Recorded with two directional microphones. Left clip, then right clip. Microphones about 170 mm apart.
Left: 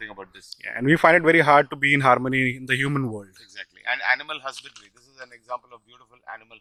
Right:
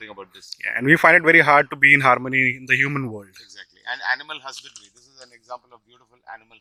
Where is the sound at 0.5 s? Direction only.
Centre (ahead or behind); by 4.5 s 20° left (ahead or behind).